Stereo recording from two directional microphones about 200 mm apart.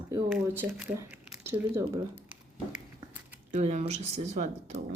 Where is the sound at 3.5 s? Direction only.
35° right (ahead or behind).